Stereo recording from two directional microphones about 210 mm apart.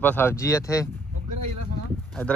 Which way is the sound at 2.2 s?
10° left (ahead or behind).